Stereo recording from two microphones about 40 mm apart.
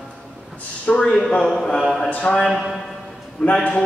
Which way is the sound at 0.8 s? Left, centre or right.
Left.